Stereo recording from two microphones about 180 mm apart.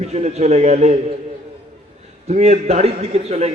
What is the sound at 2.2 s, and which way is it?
A man's voice, 40° right (ahead or behind).